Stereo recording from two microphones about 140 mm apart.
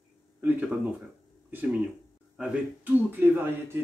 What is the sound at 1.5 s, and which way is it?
Speech, 10° right (ahead or behind).